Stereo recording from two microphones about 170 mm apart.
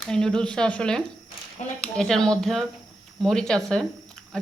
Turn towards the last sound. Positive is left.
turn(degrees=0)  # may be behind; listen again after turning